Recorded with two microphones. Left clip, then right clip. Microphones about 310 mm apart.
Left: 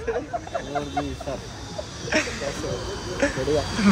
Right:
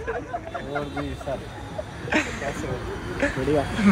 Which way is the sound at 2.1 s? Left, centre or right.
Centre.